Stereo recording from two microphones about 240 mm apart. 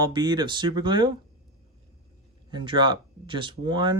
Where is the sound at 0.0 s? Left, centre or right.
Centre.